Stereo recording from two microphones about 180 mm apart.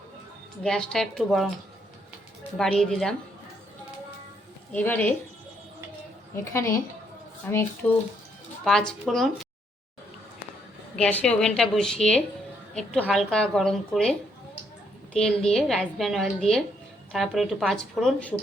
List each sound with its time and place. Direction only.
0.6 s a woman's voice: 5° left (ahead or behind)
2.6 s a woman's voice: 5° left (ahead or behind)
4.7 s a woman's voice: 10° left (ahead or behind)
6.3 s a woman's voice: 15° left (ahead or behind)
10.9 s a woman's voice: 5° left (ahead or behind)